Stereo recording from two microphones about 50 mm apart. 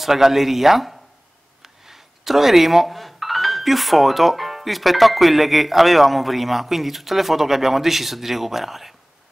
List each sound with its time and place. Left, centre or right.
0.0 s speech: centre